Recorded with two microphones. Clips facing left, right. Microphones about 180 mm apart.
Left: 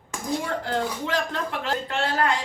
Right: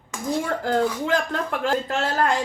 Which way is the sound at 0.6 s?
45° right (ahead or behind).